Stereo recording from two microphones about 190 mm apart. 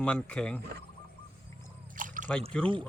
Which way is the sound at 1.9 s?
45° right (ahead or behind).